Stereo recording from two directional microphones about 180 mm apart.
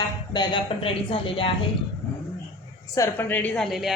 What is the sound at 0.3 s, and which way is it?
A woman's voice, 30° left (ahead or behind).